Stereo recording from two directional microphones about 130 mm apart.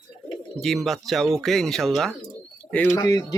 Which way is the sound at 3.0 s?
30° left (ahead or behind).